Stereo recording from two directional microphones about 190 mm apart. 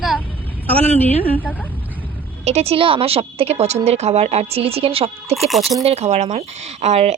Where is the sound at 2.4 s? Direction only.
35° right (ahead or behind).